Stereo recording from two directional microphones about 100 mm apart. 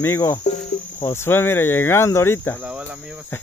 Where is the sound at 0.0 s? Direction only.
20° left (ahead or behind).